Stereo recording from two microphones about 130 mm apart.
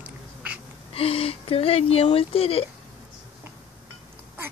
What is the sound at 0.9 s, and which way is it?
Speech, 45° left (ahead or behind).